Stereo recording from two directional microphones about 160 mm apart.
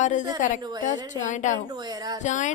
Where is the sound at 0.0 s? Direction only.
50° left (ahead or behind).